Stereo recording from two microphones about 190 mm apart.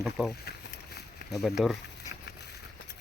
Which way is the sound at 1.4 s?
Centre (ahead or behind).